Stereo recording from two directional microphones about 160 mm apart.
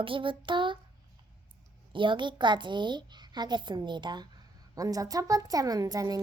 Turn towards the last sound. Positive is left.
turn(degrees=-20)  # may be behind; listen again after turning